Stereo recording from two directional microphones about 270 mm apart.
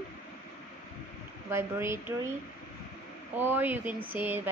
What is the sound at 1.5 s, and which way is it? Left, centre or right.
Speech, centre.